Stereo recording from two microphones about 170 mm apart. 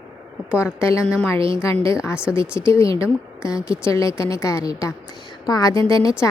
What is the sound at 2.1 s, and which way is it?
Speech, 5° right (ahead or behind).